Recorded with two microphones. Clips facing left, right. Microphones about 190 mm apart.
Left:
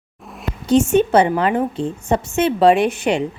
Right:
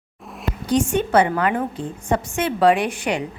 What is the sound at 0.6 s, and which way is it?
A woman's voice, 25° left (ahead or behind).